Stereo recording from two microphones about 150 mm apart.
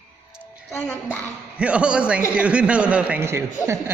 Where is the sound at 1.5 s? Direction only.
5° right (ahead or behind).